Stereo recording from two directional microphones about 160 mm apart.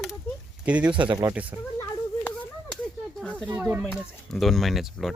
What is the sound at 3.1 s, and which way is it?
Snake, 5° right (ahead or behind).